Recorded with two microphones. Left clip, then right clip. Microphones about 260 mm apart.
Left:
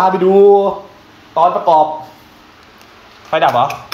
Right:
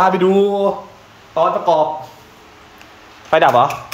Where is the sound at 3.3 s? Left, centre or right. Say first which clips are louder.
Right 1 dB; right.